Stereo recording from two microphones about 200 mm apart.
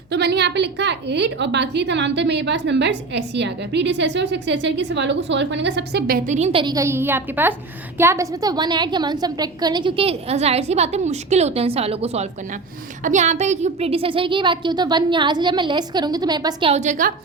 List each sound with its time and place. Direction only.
0.1 s a woman's voice: 55° right (ahead or behind); by 17.1 s 35° right (ahead or behind)